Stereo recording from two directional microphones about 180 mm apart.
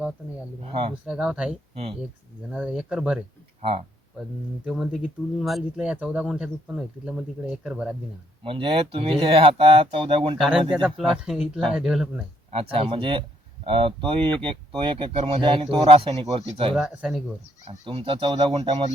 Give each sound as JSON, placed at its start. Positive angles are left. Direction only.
{"t": 0.6, "sound": "speech", "side_deg": -30}
{"t": 1.0, "sound": "speech", "side_deg": -5}
{"t": 1.7, "sound": "speech", "side_deg": -35}
{"t": 2.5, "sound": "speech", "side_deg": -5}
{"t": 3.6, "sound": "speech", "side_deg": -30}
{"t": 4.6, "sound": "speech", "side_deg": -5}
{"t": 8.4, "sound": "speech", "side_deg": -30}
{"t": 10.3, "sound": "speech", "side_deg": -5}
{"t": 12.5, "sound": "speech", "side_deg": -30}
{"t": 16.7, "sound": "speech", "side_deg": -5}
{"t": 17.7, "sound": "speech", "side_deg": -30}